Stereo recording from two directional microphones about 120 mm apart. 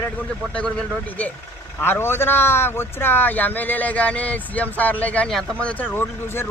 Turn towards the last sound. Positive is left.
turn(degrees=20)  # may be behind; listen again after turning